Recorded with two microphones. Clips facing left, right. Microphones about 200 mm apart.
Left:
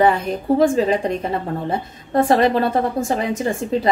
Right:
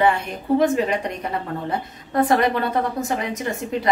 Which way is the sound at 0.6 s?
30° left (ahead or behind).